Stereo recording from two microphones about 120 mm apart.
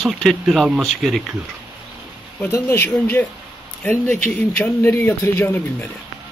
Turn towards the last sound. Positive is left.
turn(degrees=15)  # may be behind; listen again after turning